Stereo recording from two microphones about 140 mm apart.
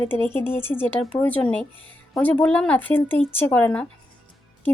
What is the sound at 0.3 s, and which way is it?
A woman's voice, 15° left (ahead or behind).